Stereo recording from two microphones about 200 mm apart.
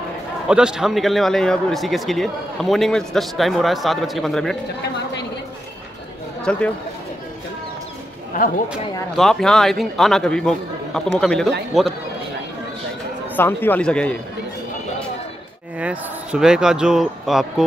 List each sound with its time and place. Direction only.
0.5 s speech: 5° right (ahead or behind)
6.5 s speech: 5° left (ahead or behind)
8.3 s speech: 40° left (ahead or behind)
9.1 s speech: centre (ahead or behind)
13.4 s speech: 10° left (ahead or behind)
15.8 s speech: 5° right (ahead or behind)